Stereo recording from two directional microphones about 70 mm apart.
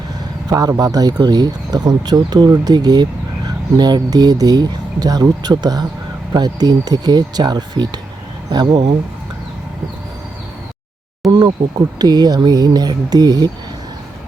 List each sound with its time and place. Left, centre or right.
0.4 s speech: right
11.3 s speech: right